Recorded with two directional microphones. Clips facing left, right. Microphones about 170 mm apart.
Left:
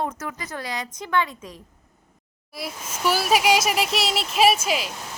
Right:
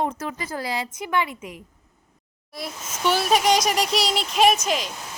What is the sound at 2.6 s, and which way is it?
A child's voice, 5° left (ahead or behind).